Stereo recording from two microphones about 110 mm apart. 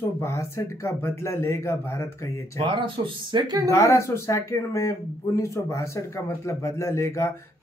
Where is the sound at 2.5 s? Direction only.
50° right (ahead or behind).